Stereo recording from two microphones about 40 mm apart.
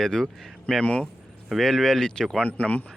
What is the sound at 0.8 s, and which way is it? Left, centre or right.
Speech, left.